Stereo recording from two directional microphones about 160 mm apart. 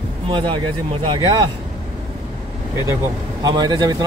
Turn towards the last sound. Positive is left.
turn(degrees=-25)  # may be behind; listen again after turning